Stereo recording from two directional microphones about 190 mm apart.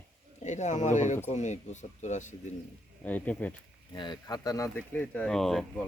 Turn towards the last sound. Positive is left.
turn(degrees=0)  # may be behind; listen again after turning